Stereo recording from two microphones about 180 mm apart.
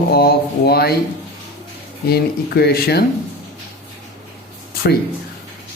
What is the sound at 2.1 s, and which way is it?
Speech, 60° left (ahead or behind).